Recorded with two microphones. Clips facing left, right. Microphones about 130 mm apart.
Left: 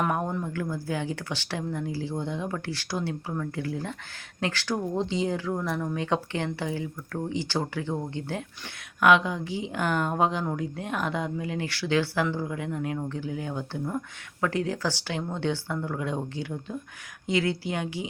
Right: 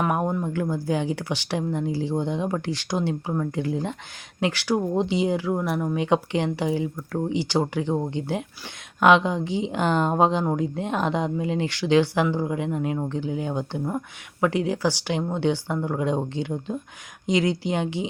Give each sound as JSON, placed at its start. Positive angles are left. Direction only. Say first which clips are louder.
{"t": 0.0, "sound": "speech", "louder": "right 4 dB", "side_deg": -15}